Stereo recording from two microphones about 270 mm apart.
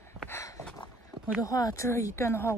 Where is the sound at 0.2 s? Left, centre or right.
Centre.